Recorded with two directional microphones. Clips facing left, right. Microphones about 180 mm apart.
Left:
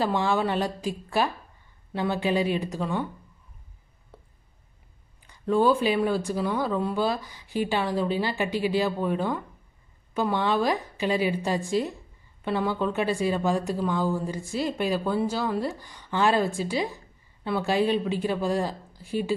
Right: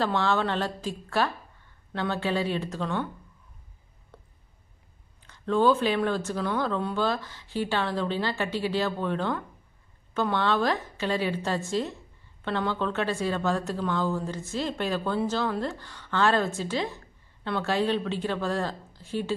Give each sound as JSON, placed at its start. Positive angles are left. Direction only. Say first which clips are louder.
{"t": 0.0, "sound": "a woman's voice", "louder": "left 1 dB", "side_deg": 10}
{"t": 4.1, "sound": "a sound", "louder": "left 1 dB", "side_deg": 5}
{"t": 5.2, "sound": "a woman's voice", "louder": "left 1 dB", "side_deg": 10}